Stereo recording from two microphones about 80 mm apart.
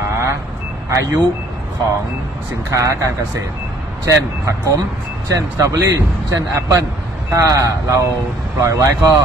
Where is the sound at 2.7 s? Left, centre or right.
Right.